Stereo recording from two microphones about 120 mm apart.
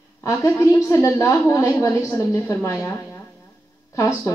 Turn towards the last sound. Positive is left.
turn(degrees=25)  # may be behind; listen again after turning